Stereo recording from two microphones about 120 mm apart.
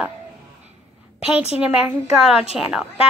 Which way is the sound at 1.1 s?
10° right (ahead or behind).